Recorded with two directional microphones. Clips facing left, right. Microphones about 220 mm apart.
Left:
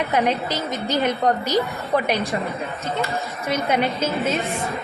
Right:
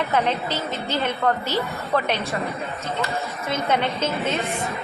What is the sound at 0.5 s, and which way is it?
A woman's voice, 15° left (ahead or behind).